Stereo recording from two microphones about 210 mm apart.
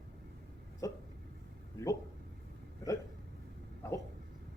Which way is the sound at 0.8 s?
15° left (ahead or behind).